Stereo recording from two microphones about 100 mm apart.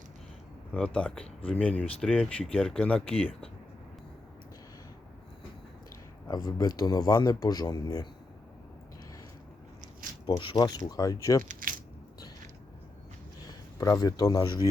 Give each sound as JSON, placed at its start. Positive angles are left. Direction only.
{"t": 0.7, "sound": "speech", "side_deg": 10}
{"t": 6.2, "sound": "speech", "side_deg": 40}
{"t": 10.4, "sound": "speech", "side_deg": 50}
{"t": 13.5, "sound": "speech", "side_deg": 35}